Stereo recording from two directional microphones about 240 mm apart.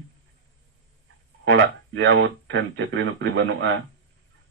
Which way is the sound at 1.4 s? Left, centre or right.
Right.